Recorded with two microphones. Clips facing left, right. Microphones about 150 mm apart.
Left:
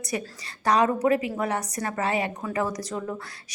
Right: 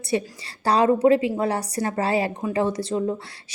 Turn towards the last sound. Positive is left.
turn(degrees=-30)  # may be behind; listen again after turning